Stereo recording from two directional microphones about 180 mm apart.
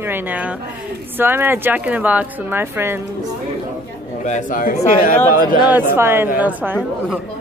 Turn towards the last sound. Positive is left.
turn(degrees=-10)  # may be behind; listen again after turning